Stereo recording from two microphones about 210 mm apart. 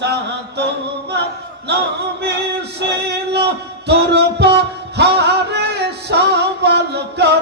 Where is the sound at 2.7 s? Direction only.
55° right (ahead or behind).